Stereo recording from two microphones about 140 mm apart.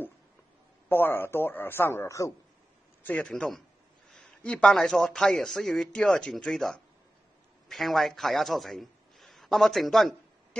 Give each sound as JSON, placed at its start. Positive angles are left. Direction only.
{"t": 0.8, "sound": "a man's voice", "side_deg": 15}
{"t": 3.0, "sound": "a man's voice", "side_deg": 10}